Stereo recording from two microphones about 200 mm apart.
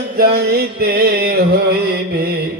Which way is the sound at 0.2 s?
50° right (ahead or behind).